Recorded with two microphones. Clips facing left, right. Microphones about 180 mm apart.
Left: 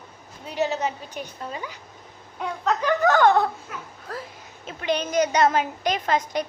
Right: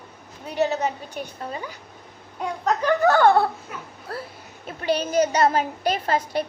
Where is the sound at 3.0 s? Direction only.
35° right (ahead or behind).